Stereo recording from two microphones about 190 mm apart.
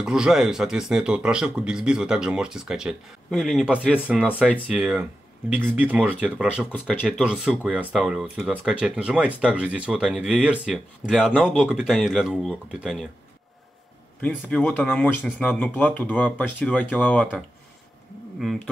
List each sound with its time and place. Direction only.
0.0 s speech: 5° right (ahead or behind)
14.2 s speech: 5° left (ahead or behind)